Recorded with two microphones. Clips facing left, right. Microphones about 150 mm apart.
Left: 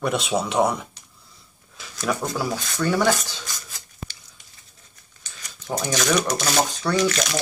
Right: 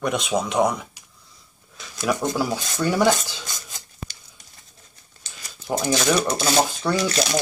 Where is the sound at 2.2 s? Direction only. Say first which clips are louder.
Right 2 dB; 20° right (ahead or behind).